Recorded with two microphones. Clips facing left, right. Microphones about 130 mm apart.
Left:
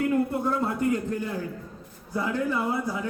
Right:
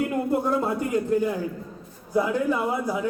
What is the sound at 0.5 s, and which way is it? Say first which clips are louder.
A man's voice: right 2 dB; 15° right (ahead or behind).